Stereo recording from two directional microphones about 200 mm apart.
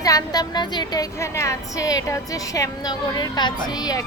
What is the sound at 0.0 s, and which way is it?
A woman's voice, 15° left (ahead or behind).